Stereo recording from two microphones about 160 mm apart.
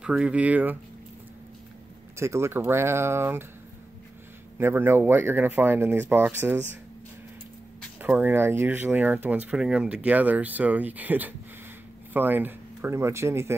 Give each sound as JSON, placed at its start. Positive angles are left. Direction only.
{"t": 0.0, "sound": "speech", "side_deg": -5}
{"t": 2.1, "sound": "speech", "side_deg": -15}
{"t": 4.6, "sound": "speech", "side_deg": -15}
{"t": 8.0, "sound": "speech", "side_deg": -10}